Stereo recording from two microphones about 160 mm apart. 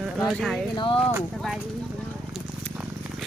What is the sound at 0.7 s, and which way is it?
Speech, 30° left (ahead or behind).